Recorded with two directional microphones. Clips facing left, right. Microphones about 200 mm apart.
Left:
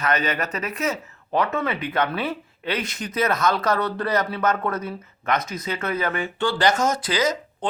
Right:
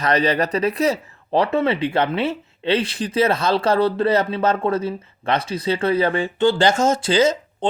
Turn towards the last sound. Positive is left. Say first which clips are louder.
# right 6 dB
turn(degrees=-25)  # may be behind; listen again after turning